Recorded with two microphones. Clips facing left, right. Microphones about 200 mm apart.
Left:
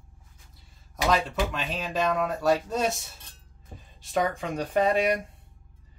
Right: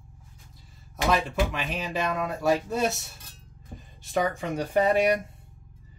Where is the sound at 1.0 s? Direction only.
10° right (ahead or behind).